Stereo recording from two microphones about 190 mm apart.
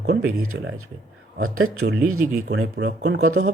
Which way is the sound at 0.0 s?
70° right (ahead or behind).